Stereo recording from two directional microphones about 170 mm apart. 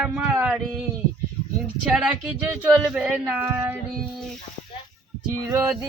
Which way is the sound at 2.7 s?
5° right (ahead or behind).